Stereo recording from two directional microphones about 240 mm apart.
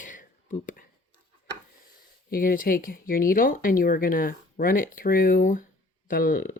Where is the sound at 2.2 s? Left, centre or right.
Left.